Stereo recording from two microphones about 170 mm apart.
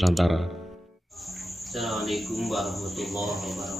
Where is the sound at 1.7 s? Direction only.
Centre (ahead or behind).